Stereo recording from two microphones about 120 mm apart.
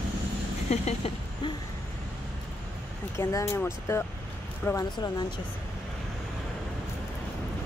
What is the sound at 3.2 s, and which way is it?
Speech, 25° left (ahead or behind).